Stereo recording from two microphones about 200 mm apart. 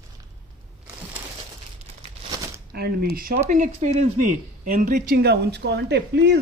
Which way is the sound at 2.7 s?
50° right (ahead or behind).